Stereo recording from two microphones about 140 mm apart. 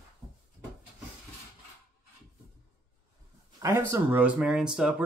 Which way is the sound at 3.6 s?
20° right (ahead or behind).